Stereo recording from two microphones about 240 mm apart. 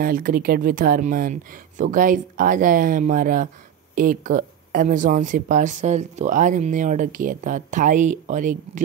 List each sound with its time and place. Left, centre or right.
0.0 s speech: right